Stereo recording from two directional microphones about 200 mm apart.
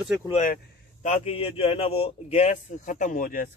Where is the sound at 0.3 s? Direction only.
40° left (ahead or behind).